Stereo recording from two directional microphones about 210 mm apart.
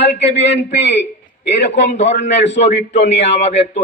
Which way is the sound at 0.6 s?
55° left (ahead or behind).